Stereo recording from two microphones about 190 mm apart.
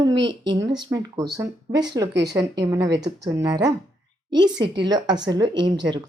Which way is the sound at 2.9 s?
65° right (ahead or behind).